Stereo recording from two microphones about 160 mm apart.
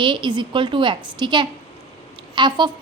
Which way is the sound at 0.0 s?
30° right (ahead or behind).